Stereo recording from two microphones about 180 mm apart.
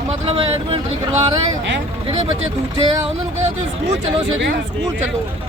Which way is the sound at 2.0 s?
30° right (ahead or behind).